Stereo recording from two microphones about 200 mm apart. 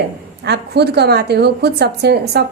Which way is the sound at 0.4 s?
55° right (ahead or behind).